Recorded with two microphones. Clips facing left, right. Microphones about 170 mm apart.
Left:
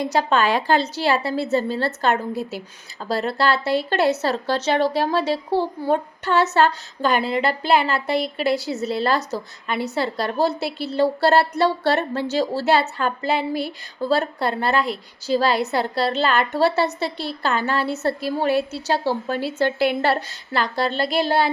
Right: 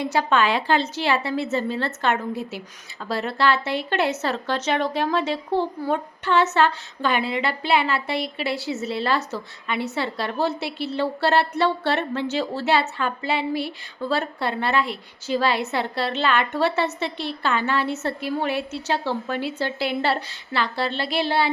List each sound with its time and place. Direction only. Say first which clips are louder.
0.0 s speech: left 1 dB; 40° left (ahead or behind)
19.6 s a woman's voice: left 6 dB; 50° left (ahead or behind)